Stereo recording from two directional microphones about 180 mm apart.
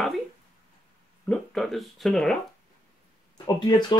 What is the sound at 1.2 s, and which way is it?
Speech, 5° left (ahead or behind).